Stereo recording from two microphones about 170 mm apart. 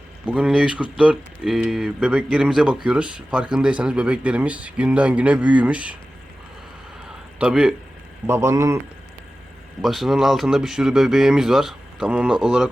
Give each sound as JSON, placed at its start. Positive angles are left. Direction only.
{"t": 0.3, "sound": "speech", "side_deg": -5}
{"t": 7.3, "sound": "a man's voice", "side_deg": -5}
{"t": 8.3, "sound": "speech", "side_deg": -15}
{"t": 9.8, "sound": "a man's voice", "side_deg": 0}